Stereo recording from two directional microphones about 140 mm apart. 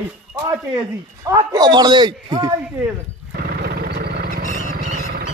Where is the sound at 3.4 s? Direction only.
90° right.